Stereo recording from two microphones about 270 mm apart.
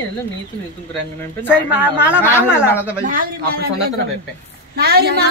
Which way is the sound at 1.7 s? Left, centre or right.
Centre.